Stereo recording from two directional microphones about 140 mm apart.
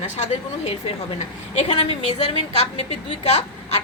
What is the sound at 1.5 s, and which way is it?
A woman's voice, 50° left (ahead or behind).